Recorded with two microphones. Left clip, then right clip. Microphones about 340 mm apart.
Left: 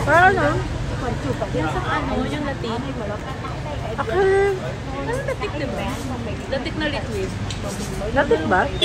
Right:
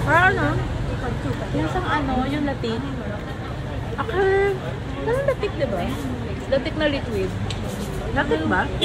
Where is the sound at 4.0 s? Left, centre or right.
Centre.